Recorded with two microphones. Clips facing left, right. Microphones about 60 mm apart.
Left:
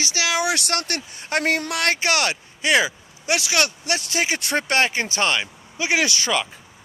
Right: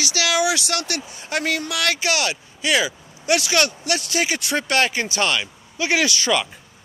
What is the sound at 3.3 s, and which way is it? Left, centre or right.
Speech, centre.